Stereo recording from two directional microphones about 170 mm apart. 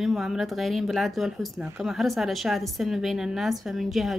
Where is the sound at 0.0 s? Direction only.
Centre (ahead or behind).